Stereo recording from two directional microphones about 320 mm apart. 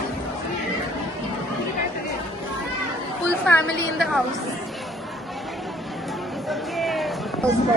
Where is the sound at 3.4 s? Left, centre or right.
Centre.